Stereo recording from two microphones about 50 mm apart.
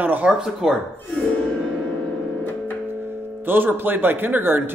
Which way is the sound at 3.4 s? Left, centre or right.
Right.